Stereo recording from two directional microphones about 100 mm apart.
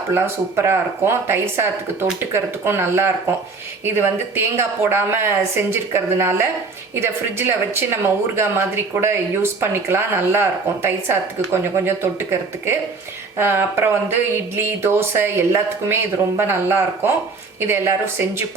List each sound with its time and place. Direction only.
0.1 s speech: 25° right (ahead or behind)